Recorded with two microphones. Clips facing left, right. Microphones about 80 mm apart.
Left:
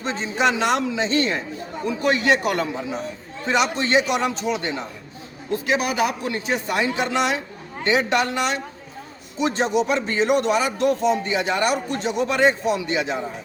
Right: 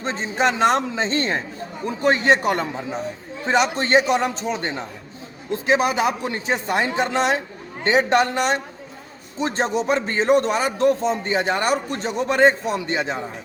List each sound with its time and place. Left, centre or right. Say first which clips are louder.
0.0 s speech: even; right